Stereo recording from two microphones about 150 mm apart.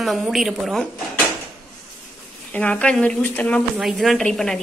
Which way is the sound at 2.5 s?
10° left (ahead or behind).